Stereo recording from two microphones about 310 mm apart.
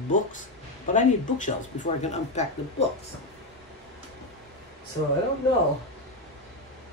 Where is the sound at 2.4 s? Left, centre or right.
Left.